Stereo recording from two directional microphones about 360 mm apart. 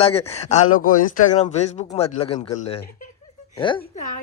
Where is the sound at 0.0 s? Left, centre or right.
Centre.